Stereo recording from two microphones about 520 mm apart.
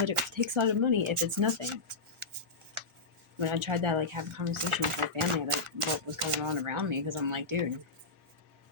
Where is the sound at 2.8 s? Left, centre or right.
Right.